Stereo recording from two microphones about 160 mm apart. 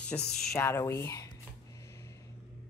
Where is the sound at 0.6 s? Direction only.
15° left (ahead or behind).